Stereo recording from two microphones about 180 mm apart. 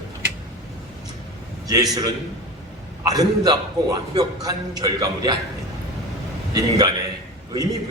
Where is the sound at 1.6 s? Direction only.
20° right (ahead or behind).